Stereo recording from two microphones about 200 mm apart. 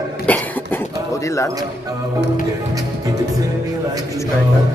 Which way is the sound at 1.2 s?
15° left (ahead or behind).